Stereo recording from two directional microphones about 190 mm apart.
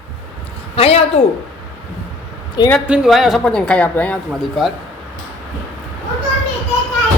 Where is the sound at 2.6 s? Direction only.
20° left (ahead or behind).